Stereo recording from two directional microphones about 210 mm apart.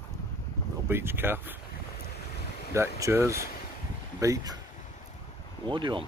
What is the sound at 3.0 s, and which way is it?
Speech, 10° right (ahead or behind).